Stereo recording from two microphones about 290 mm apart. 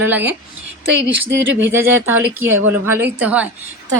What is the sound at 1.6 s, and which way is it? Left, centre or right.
A woman's voice, centre.